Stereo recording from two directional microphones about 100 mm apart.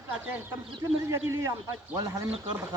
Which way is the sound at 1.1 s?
25° right (ahead or behind).